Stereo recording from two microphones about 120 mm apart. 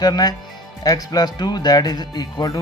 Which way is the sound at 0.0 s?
35° left (ahead or behind).